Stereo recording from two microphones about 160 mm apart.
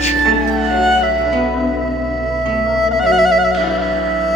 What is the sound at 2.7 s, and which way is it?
Music, centre (ahead or behind).